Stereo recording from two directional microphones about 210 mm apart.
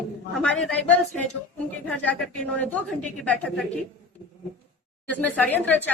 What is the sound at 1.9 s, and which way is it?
Speech, 5° left (ahead or behind).